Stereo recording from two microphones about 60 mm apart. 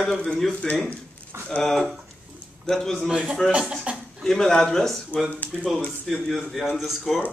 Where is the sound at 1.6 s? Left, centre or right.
Centre.